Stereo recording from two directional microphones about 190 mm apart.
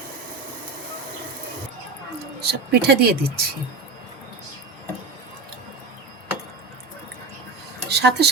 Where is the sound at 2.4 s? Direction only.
60° right (ahead or behind).